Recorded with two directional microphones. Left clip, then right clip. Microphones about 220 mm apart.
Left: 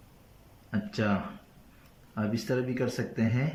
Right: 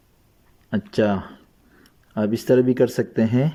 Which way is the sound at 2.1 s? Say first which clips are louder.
Right 13 dB; 15° right (ahead or behind).